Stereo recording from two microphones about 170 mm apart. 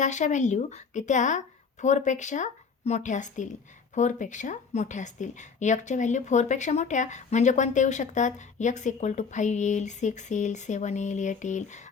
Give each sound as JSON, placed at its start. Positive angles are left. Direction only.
{"t": 0.0, "sound": "a woman's voice", "side_deg": 45}